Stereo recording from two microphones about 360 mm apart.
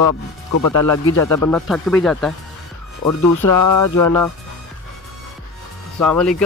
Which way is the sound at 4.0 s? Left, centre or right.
Centre.